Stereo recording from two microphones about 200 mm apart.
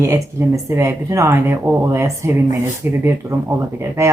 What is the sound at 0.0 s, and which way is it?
Speech, 15° right (ahead or behind).